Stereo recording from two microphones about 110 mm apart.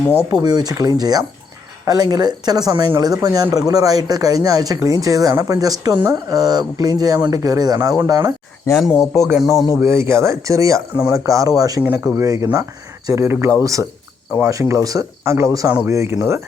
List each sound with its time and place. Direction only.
0.3 s speech: 40° right (ahead or behind)
8.7 s speech: centre (ahead or behind)
9.8 s speech: 25° right (ahead or behind)
11.8 s speech: 20° right (ahead or behind)